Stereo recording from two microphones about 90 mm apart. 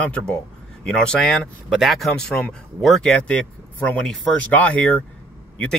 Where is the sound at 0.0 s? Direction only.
15° left (ahead or behind).